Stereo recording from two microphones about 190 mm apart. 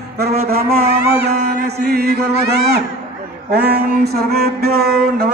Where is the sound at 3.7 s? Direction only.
55° right (ahead or behind).